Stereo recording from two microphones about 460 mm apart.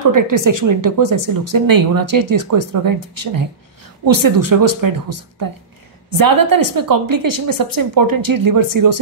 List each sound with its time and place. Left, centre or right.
0.0 s speech: right